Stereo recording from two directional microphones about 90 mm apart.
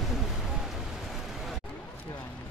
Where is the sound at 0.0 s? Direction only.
5° right (ahead or behind).